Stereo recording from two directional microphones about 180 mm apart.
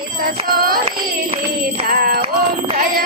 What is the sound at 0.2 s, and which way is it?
Music, 55° right (ahead or behind).